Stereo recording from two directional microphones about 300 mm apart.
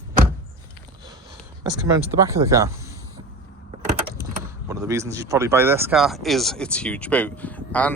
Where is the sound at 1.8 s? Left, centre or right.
Centre.